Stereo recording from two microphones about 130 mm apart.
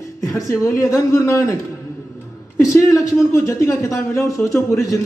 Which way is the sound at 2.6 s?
20° left (ahead or behind).